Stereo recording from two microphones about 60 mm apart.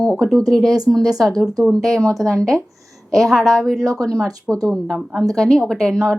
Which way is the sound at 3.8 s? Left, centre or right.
Right.